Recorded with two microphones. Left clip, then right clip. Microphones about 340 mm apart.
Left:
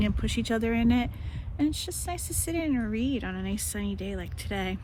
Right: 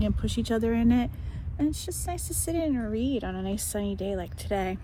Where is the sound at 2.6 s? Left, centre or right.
Centre.